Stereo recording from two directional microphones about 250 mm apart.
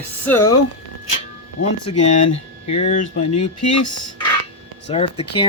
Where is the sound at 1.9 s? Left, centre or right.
Left.